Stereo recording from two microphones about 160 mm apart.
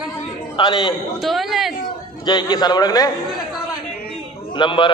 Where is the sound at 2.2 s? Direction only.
25° left (ahead or behind).